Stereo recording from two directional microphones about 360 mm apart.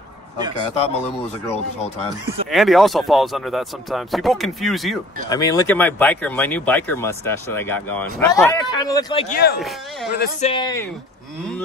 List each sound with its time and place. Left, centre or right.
0.8 s speech: centre
2.5 s speech: centre
10.1 s speech: left
10.5 s speech: centre